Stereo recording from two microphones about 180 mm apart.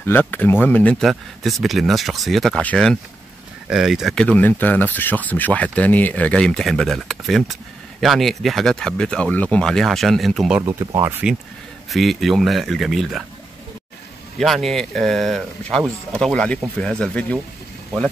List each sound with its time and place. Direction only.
0.0 s speech: 10° left (ahead or behind)
10.6 s speech: 25° right (ahead or behind)
11.9 s speech: centre (ahead or behind)
14.4 s speech: centre (ahead or behind)